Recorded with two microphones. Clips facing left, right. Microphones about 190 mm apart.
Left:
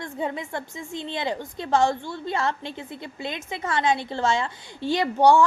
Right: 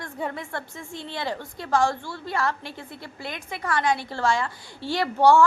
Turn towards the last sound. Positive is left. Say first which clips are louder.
# left 1 dB
turn(degrees=15)  # may be behind; listen again after turning